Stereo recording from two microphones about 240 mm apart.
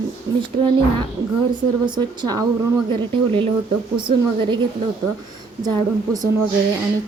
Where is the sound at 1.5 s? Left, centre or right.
Centre.